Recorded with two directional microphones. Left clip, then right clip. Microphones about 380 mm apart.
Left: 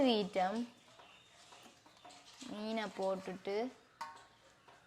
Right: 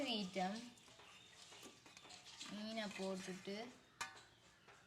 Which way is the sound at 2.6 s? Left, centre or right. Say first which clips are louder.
Left 8 dB; left.